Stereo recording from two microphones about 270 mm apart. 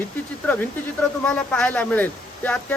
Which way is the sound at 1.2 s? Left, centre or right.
Centre.